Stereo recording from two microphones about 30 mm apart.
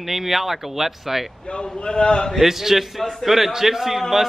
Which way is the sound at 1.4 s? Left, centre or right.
Left.